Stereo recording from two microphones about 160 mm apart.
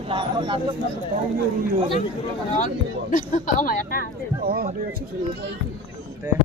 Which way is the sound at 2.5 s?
55° left (ahead or behind).